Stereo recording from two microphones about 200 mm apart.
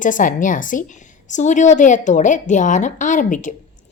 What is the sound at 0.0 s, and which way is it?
Speech, 40° left (ahead or behind).